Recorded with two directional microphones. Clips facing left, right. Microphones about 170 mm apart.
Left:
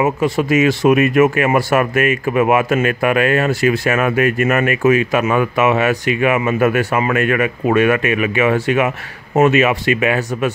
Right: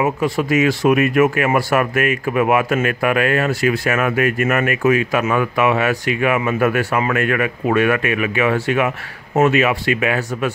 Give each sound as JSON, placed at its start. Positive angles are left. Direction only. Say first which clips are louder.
{"t": 0.0, "sound": "speech", "louder": "left 2 dB", "side_deg": 20}